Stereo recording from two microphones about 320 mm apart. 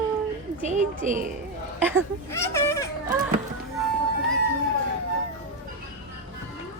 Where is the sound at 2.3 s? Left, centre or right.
Centre.